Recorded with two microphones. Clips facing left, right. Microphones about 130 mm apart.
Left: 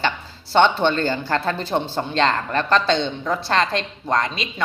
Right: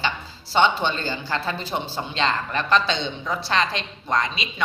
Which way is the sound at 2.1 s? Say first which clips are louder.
Left 4 dB; 55° left (ahead or behind).